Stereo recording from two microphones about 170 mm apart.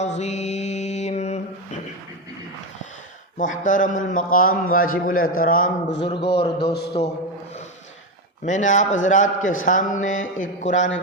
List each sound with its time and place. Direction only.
0.0 s mantra: 40° left (ahead or behind)
3.3 s a man's voice: 50° left (ahead or behind)
6.0 s a man's voice: 35° left (ahead or behind)
8.4 s a man's voice: 45° left (ahead or behind)